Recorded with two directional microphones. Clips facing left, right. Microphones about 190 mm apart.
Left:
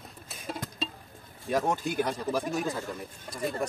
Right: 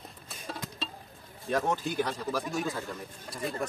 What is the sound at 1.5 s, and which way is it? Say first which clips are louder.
Speech: left 1 dB; 15° left (ahead or behind).